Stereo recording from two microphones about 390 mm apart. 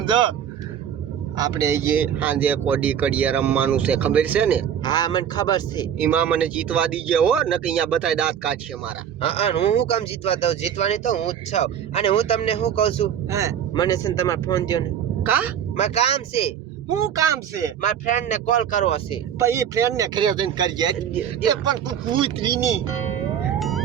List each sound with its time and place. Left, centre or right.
0.0 s speech: centre
1.4 s speech: centre
4.8 s speech: centre
6.0 s speech: centre
9.2 s speech: centre
16.9 s speech: centre
17.8 s speech: centre
19.4 s speech: centre
23.6 s emergency vehicle: centre